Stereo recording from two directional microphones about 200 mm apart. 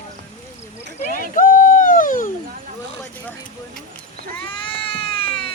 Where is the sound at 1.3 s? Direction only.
40° left (ahead or behind).